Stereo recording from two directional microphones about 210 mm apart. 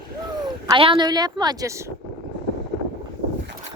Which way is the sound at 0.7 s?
25° right (ahead or behind).